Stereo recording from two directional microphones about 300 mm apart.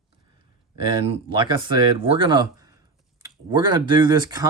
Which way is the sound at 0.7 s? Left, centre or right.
Centre.